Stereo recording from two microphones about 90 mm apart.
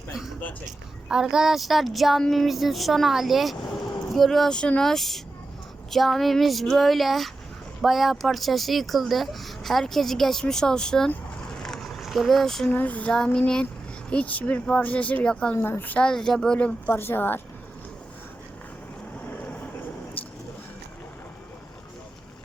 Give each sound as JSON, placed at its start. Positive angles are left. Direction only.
{"t": 0.1, "sound": "a sound", "side_deg": -5}
{"t": 1.0, "sound": "speech", "side_deg": -5}
{"t": 11.5, "sound": "a sound", "side_deg": 5}
{"t": 12.7, "sound": "speech", "side_deg": 15}
{"t": 15.5, "sound": "a woman's voice", "side_deg": 25}
{"t": 16.0, "sound": "speech", "side_deg": 5}
{"t": 16.9, "sound": "a woman's voice", "side_deg": 25}